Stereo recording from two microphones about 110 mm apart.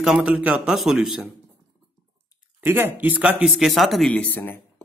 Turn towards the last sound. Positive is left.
turn(degrees=15)  # may be behind; listen again after turning